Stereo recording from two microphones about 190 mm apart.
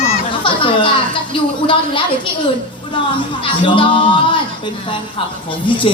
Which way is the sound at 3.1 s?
25° left (ahead or behind).